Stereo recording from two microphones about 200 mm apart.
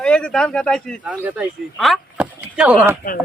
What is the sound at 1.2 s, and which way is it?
Speech, 10° right (ahead or behind).